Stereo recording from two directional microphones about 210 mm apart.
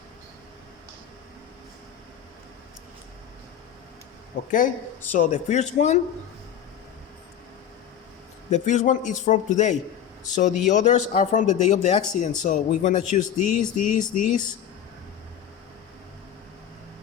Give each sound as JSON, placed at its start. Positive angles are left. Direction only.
{"t": 5.1, "sound": "speech", "side_deg": 35}
{"t": 8.4, "sound": "speech", "side_deg": 35}